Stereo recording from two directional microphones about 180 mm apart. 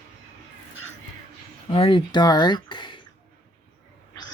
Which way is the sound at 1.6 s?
30° left (ahead or behind).